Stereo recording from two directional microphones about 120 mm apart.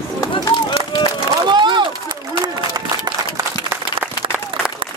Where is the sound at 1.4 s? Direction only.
40° right (ahead or behind).